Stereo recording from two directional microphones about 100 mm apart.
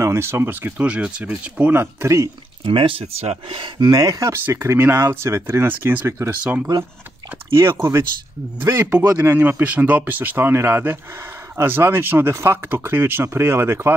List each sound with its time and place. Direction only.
0.0 s speech: 25° right (ahead or behind)
2.6 s speech: 60° right (ahead or behind); by 4.3 s 35° right (ahead or behind)
4.3 s speech: 25° right (ahead or behind)
9.0 s speech: 30° right (ahead or behind)
9.3 s speech: 20° right (ahead or behind)